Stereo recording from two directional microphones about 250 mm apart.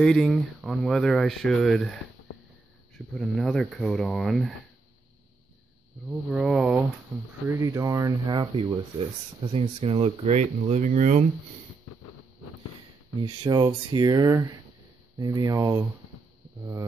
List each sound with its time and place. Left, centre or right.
0.0 s speech: centre
3.2 s speech: centre
6.3 s speech: centre
7.4 s speech: centre; by 11.2 s right
13.4 s speech: centre